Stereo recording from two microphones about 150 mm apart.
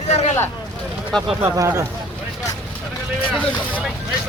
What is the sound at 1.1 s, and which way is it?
Speech, 5° left (ahead or behind).